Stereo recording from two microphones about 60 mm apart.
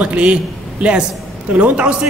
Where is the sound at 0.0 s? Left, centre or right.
Right.